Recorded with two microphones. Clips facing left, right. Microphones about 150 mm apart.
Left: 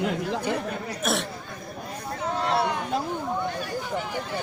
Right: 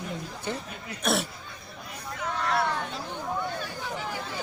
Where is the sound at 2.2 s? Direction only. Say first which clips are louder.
Left 3 dB; 30° left (ahead or behind).